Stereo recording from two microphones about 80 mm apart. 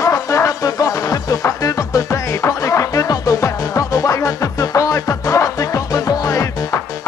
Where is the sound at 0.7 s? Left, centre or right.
Left.